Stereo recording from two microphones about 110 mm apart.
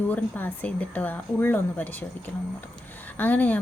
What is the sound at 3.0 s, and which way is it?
Speech, 15° left (ahead or behind).